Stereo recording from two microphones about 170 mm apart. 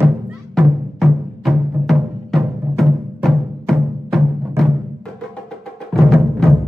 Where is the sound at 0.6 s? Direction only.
Centre (ahead or behind).